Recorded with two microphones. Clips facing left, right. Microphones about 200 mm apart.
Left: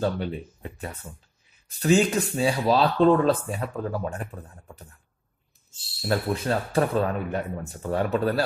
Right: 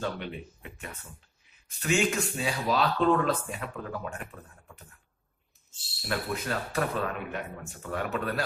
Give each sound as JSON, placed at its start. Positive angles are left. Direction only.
{"t": 0.0, "sound": "speech", "side_deg": 35}
{"t": 5.9, "sound": "speech", "side_deg": 35}